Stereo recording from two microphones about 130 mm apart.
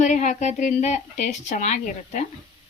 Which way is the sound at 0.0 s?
65° left (ahead or behind).